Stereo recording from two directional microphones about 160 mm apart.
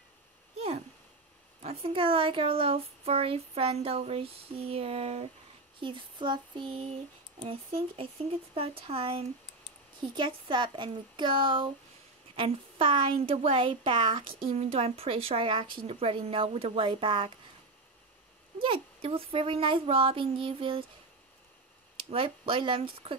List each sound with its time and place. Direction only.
0.6 s a sound: 40° right (ahead or behind)
1.6 s speech: 40° right (ahead or behind)
18.6 s speech: 35° right (ahead or behind)
21.9 s speech: 35° right (ahead or behind)